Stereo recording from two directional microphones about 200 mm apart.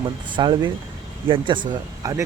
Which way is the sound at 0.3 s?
20° right (ahead or behind).